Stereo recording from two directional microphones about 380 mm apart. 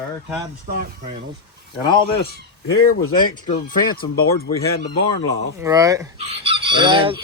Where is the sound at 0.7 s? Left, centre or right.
Right.